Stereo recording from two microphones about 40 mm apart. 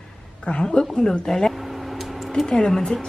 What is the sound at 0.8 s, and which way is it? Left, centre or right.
Speech, centre.